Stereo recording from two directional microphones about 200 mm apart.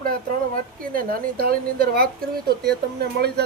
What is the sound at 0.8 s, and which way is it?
Speech, 45° right (ahead or behind).